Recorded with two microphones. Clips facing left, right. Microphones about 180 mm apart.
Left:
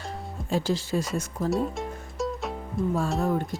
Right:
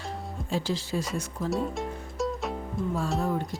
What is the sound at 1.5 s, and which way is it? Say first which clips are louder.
Music: left 1 dB; centre (ahead or behind).